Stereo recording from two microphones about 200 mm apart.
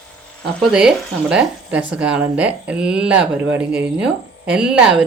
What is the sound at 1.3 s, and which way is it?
Speech, 5° right (ahead or behind).